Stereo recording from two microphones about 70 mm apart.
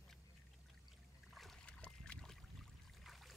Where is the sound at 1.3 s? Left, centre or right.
Centre.